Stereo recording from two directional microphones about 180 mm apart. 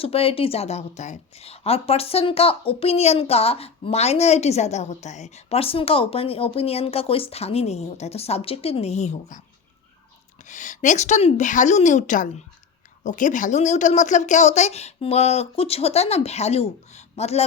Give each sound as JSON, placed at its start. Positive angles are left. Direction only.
{"t": 0.0, "sound": "a woman's voice", "side_deg": 30}
{"t": 10.5, "sound": "a woman's voice", "side_deg": 45}